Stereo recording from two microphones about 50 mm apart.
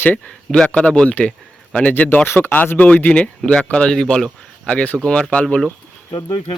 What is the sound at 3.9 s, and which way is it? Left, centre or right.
Speech, centre.